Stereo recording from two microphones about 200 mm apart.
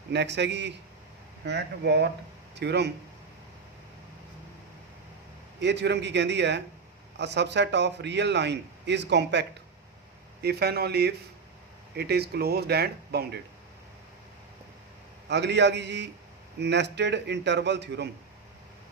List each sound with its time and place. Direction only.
0.1 s a man's voice: 60° right (ahead or behind)
5.5 s a man's voice: 60° right (ahead or behind)
15.3 s a man's voice: 60° right (ahead or behind)